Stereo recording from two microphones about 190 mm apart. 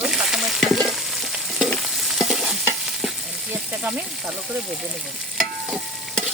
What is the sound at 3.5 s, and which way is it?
Speech, 5° right (ahead or behind).